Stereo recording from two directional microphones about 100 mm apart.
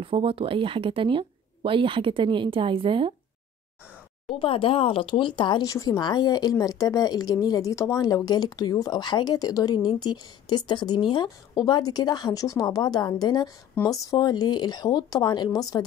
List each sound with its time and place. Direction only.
0.0 s speech: 60° right (ahead or behind)
4.3 s speech: 65° left (ahead or behind); by 5.7 s 50° left (ahead or behind)
5.7 s speech: 40° left (ahead or behind)